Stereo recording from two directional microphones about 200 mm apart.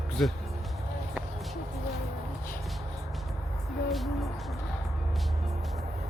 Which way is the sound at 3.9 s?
Centre (ahead or behind).